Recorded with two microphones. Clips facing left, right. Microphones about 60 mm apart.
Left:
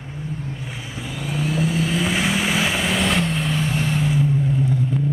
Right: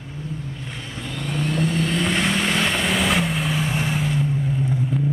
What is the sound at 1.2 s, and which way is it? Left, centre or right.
Vehicle, centre.